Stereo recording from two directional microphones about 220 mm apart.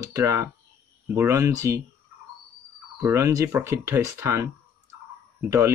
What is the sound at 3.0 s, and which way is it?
Speech, 10° right (ahead or behind).